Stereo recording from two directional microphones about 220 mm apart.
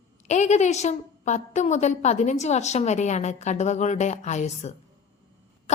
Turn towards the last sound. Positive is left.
turn(degrees=30)  # may be behind; listen again after turning